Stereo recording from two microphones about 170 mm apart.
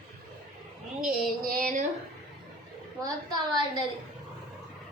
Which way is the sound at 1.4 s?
50° right (ahead or behind).